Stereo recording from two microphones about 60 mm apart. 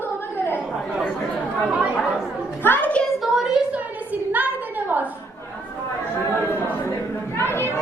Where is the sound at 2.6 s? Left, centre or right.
Left.